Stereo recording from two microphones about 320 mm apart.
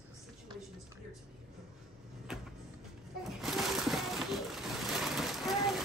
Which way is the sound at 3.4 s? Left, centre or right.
Centre.